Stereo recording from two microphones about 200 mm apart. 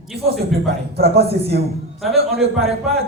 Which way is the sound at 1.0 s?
55° right (ahead or behind).